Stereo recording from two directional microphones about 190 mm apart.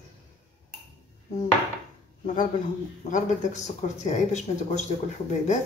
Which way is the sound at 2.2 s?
40° left (ahead or behind).